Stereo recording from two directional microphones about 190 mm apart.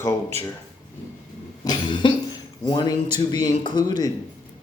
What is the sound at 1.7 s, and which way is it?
Cough, 25° left (ahead or behind).